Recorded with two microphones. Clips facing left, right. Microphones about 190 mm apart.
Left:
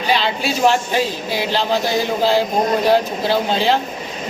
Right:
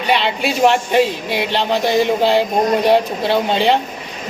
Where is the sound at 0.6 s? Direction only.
Centre (ahead or behind).